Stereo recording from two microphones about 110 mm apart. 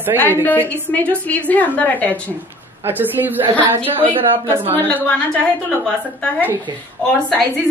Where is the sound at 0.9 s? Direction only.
10° left (ahead or behind).